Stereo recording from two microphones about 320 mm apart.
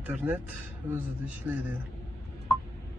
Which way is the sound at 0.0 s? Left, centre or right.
Centre.